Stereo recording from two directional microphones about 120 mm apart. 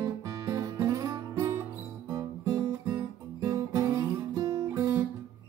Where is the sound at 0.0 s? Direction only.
30° right (ahead or behind).